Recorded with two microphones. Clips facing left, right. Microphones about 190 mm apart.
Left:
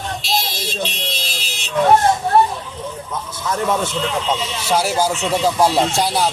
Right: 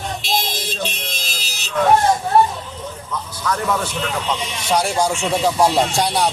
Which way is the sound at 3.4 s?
25° left (ahead or behind).